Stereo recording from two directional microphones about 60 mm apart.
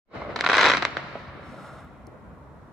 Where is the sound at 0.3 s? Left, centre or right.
Centre.